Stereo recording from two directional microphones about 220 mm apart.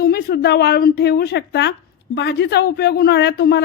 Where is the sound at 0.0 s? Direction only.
45° left (ahead or behind).